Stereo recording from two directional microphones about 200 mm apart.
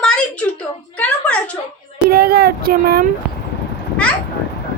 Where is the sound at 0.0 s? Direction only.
5° left (ahead or behind).